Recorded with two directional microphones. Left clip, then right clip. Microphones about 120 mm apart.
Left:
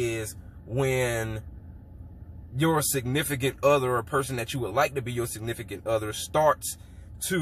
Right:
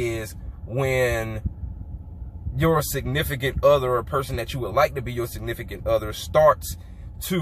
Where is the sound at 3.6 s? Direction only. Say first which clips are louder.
Right 5 dB; 10° left (ahead or behind).